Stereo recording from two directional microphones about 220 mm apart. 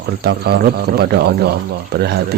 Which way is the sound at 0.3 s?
45° right (ahead or behind).